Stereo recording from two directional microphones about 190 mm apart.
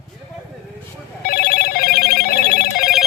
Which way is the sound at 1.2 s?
50° left (ahead or behind).